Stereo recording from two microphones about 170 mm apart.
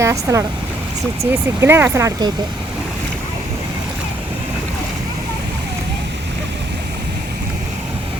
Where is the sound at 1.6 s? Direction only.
15° right (ahead or behind).